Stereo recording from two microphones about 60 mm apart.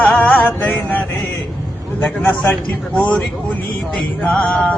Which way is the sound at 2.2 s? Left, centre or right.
Left.